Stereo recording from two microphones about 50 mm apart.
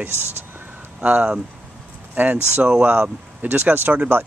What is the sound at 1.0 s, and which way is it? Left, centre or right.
Speech, right.